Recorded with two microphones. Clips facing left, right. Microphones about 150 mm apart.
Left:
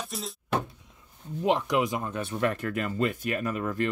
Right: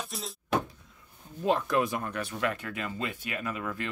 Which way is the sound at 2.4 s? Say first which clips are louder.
Left 6 dB; 45° left (ahead or behind).